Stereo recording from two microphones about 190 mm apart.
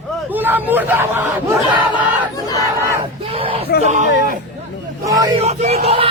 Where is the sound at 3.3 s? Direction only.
30° right (ahead or behind).